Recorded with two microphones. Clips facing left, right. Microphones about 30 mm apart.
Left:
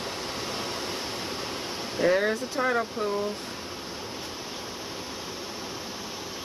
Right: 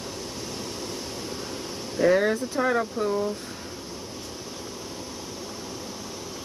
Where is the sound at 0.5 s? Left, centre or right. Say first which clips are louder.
Left 2 dB; left.